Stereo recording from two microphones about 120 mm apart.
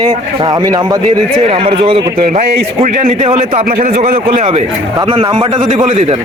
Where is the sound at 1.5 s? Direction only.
50° right (ahead or behind).